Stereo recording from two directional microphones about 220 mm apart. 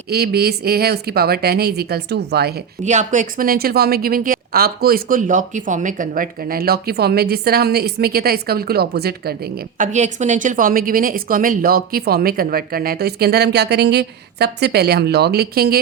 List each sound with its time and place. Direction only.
0.1 s a woman's voice: 45° right (ahead or behind)
2.8 s a woman's voice: 35° right (ahead or behind)
9.7 s a woman's voice: 35° right (ahead or behind)